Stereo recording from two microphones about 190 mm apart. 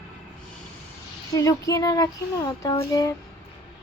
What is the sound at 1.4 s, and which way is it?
Speech, 15° left (ahead or behind).